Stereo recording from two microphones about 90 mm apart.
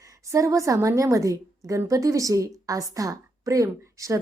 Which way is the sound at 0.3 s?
35° right (ahead or behind).